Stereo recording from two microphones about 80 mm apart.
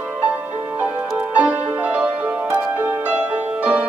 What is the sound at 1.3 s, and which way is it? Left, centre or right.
Music, centre.